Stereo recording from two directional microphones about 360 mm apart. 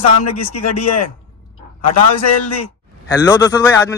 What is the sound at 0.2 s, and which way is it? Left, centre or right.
Speech, left.